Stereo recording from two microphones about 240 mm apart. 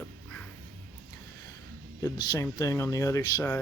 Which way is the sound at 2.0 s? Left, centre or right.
Centre.